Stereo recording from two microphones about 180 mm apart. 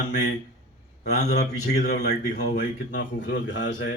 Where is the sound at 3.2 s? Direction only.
80° left.